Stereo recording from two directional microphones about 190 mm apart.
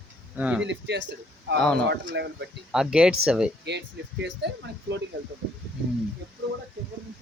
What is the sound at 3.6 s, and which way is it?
Speech, 65° right (ahead or behind).